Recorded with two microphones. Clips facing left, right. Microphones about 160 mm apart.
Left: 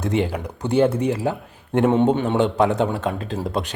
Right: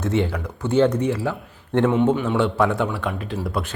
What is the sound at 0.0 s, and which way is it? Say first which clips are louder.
Speech: even; 15° left (ahead or behind).